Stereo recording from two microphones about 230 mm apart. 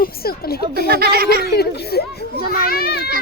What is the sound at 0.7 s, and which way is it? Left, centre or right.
Speech, right.